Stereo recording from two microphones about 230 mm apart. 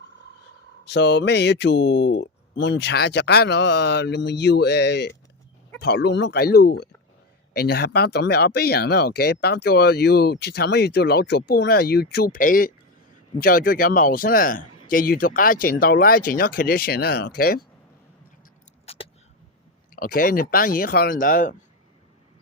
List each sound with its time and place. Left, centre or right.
0.9 s speech: left
18.9 s a sound: left
20.0 s speech: left